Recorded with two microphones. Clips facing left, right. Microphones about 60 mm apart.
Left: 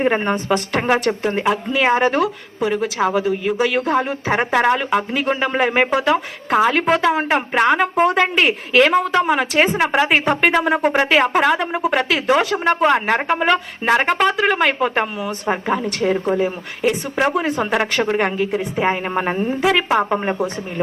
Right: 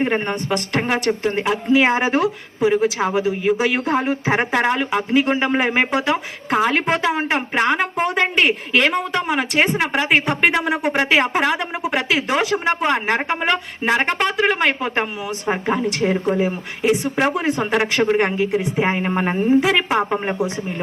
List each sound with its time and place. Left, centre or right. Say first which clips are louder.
0.0 s a woman's voice: left 2 dB; centre
1.7 s a woman's voice: right 1 dB; centre
16.1 s a woman's voice: even; centre